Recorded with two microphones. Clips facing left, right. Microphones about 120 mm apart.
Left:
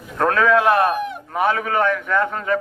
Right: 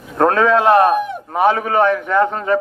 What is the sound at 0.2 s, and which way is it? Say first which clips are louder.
A man's voice: right 3 dB; 30° right (ahead or behind).